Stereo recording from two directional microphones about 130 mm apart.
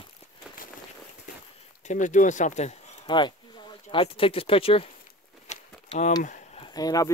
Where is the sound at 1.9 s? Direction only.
75° left (ahead or behind).